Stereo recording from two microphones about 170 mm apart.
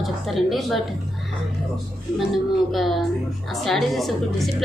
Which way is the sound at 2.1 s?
Centre (ahead or behind).